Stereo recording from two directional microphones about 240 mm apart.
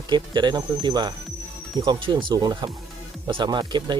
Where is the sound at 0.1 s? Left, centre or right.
Centre.